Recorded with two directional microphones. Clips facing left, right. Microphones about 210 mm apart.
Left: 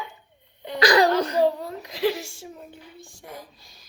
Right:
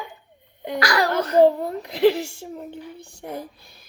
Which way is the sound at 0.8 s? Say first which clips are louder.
Left 4 dB; 20° left (ahead or behind).